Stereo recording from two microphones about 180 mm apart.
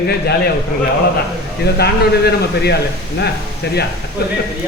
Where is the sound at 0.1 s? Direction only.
60° left (ahead or behind).